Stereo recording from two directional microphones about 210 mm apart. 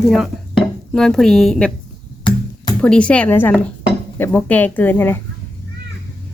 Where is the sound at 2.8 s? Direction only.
5° left (ahead or behind).